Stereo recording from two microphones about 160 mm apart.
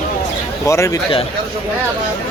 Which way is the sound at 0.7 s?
20° left (ahead or behind).